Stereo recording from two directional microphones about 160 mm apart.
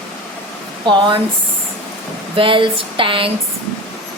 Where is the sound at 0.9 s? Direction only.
30° right (ahead or behind).